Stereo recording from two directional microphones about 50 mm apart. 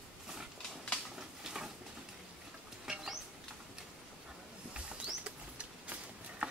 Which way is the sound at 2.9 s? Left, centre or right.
Centre.